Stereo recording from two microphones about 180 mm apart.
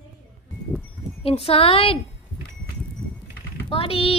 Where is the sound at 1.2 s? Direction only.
35° left (ahead or behind).